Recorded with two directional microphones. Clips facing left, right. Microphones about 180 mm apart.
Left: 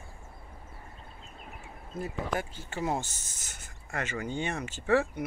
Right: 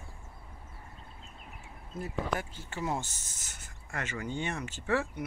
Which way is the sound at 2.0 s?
20° left (ahead or behind).